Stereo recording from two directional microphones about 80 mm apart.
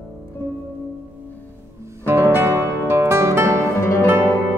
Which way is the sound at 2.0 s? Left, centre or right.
Right.